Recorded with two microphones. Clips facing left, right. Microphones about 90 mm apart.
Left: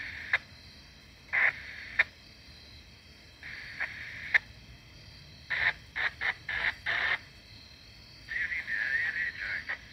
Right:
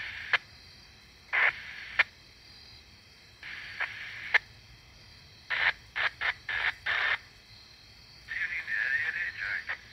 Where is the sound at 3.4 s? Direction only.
90° right.